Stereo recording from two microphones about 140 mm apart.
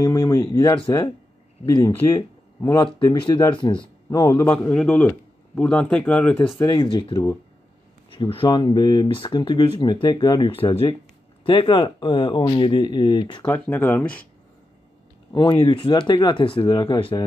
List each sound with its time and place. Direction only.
0.0 s speech: 25° left (ahead or behind)
4.6 s speech: 10° left (ahead or behind)
6.6 s speech: 30° left (ahead or behind)
13.5 s speech: 15° left (ahead or behind)
15.3 s speech: 40° left (ahead or behind)